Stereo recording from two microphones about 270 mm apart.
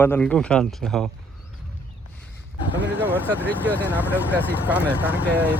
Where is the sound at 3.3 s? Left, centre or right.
Centre.